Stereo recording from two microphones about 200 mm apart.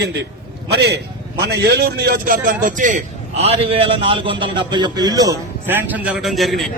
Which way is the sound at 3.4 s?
30° right (ahead or behind).